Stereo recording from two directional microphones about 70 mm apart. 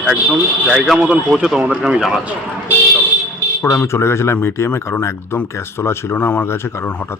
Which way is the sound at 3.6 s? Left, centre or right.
Left.